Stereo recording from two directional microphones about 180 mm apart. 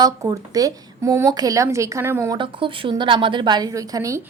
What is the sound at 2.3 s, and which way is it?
A woman's voice, 30° right (ahead or behind).